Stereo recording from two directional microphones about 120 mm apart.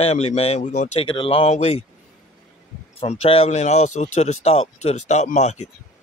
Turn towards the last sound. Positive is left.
turn(degrees=75)  # may be behind; listen again after turning